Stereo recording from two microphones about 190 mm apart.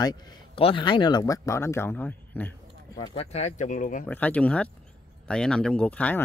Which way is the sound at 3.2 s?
35° left (ahead or behind).